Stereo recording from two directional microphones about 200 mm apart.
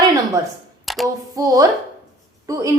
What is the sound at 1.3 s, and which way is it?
A woman's voice, 15° right (ahead or behind).